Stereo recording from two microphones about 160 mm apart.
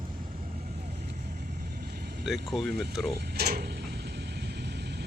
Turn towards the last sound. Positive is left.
turn(degrees=-75)  # may be behind; listen again after turning